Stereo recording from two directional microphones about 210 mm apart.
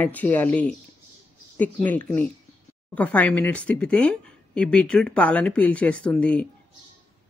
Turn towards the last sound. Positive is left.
turn(degrees=5)  # may be behind; listen again after turning